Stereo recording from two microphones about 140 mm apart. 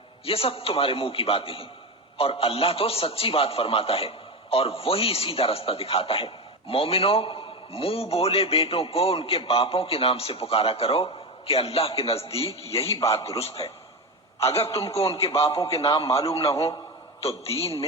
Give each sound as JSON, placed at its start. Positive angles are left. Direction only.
{"t": 0.3, "sound": "a man's voice", "side_deg": 40}